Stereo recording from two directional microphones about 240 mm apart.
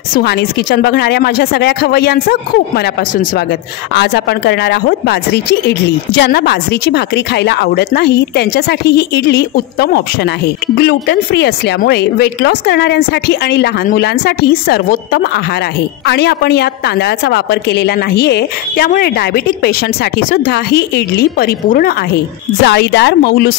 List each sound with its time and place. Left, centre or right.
0.1 s a woman's voice: left